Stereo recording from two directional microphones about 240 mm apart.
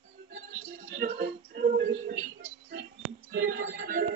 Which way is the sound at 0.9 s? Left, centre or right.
Right.